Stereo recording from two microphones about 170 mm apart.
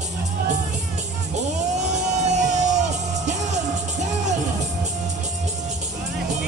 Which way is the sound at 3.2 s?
45° right (ahead or behind).